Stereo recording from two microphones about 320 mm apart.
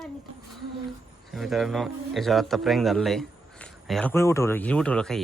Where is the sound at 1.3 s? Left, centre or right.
Centre.